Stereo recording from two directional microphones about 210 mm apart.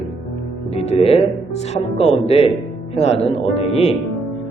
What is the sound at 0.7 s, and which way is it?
A man's voice, 30° left (ahead or behind).